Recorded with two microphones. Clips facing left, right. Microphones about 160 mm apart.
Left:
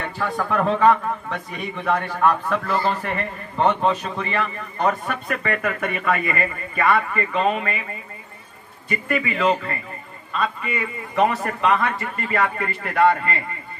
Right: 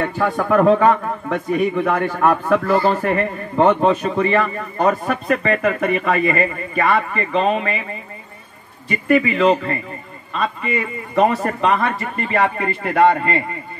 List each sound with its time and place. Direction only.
0.0 s a man's voice: 50° right (ahead or behind)
5.0 s a man's voice: 35° right (ahead or behind)
8.8 s a man's voice: 30° right (ahead or behind)